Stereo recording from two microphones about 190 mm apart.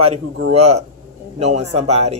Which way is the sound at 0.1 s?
35° right (ahead or behind).